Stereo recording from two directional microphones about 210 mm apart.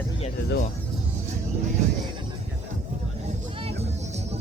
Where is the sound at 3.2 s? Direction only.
30° right (ahead or behind).